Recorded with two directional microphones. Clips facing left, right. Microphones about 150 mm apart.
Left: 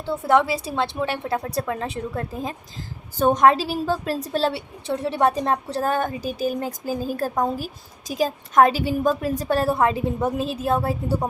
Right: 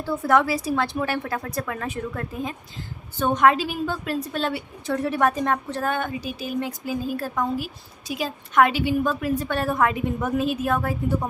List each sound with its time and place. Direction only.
0.0 s a woman's voice: 25° left (ahead or behind)